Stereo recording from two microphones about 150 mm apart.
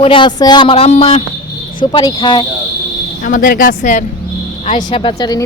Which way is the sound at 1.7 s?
30° left (ahead or behind).